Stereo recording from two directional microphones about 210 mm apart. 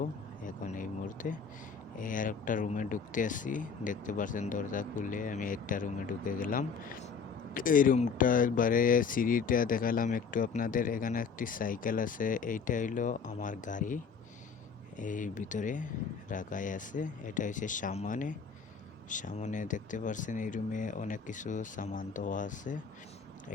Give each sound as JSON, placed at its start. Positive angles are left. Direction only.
{"t": 0.4, "sound": "speech", "side_deg": 40}